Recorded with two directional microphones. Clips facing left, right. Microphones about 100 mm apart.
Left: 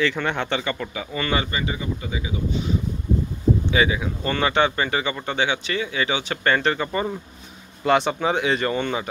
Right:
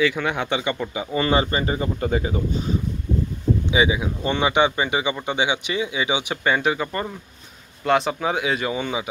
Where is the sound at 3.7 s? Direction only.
15° right (ahead or behind).